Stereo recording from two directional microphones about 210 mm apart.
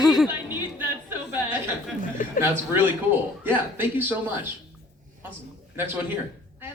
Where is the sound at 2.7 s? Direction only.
10° right (ahead or behind).